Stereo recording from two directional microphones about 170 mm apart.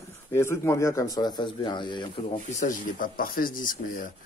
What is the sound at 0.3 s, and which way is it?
Speech, 15° left (ahead or behind).